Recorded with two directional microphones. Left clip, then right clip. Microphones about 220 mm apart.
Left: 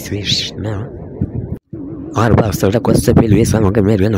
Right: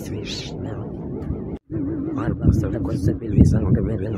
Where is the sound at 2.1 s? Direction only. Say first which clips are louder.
Left 17 dB; 45° left (ahead or behind).